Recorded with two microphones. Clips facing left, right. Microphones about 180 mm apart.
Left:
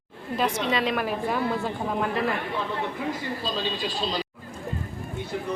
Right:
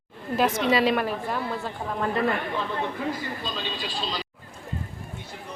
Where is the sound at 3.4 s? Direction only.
40° left (ahead or behind).